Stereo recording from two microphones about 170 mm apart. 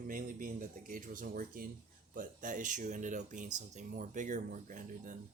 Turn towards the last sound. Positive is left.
turn(degrees=-50)  # may be behind; listen again after turning